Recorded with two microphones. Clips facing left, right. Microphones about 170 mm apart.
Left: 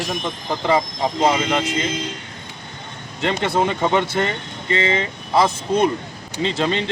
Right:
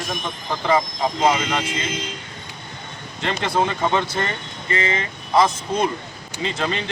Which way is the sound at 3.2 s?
25° left (ahead or behind).